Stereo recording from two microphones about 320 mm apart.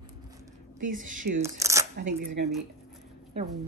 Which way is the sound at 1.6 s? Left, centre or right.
Centre.